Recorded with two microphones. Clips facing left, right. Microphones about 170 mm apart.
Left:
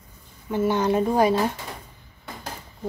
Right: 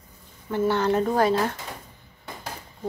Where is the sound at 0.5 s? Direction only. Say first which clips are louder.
Left 1 dB; 15° left (ahead or behind).